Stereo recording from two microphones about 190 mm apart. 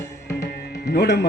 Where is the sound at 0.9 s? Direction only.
60° left (ahead or behind).